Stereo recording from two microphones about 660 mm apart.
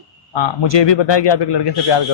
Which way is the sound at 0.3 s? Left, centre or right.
Left.